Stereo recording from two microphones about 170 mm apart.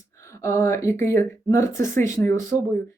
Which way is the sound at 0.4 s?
15° left (ahead or behind).